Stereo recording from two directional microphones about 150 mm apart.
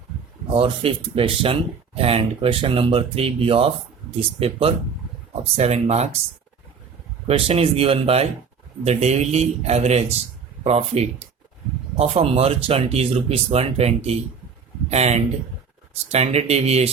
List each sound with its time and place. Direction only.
0.5 s speech: 35° right (ahead or behind)
7.3 s speech: 40° right (ahead or behind)